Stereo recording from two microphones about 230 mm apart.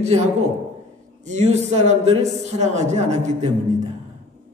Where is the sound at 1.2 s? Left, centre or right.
Right.